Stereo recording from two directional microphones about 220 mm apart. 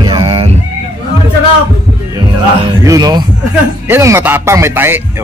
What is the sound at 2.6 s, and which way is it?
Speech, 15° right (ahead or behind).